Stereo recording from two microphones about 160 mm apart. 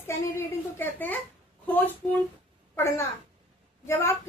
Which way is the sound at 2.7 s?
15° left (ahead or behind).